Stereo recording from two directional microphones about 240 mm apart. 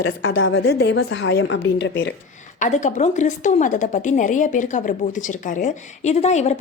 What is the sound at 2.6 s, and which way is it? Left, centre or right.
A woman's voice, left.